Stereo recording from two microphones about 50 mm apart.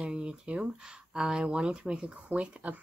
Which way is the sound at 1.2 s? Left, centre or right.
Centre.